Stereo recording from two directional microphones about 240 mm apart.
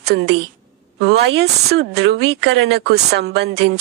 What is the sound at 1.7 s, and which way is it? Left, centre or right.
Speech, right.